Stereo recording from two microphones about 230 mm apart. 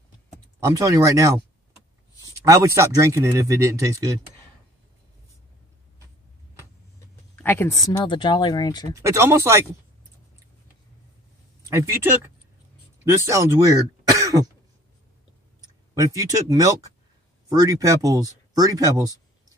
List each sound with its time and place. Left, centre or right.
0.7 s speech: centre
2.4 s speech: centre
7.3 s speech: centre
9.0 s speech: centre
11.7 s speech: centre
15.9 s speech: centre